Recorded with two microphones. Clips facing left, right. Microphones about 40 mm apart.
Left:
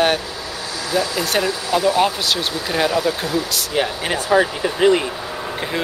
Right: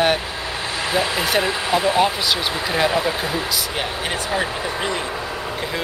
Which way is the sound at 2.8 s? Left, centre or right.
Right.